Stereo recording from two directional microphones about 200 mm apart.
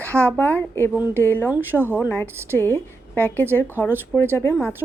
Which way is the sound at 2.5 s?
10° left (ahead or behind).